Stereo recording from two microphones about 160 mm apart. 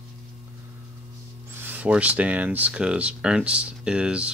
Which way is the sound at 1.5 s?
10° right (ahead or behind).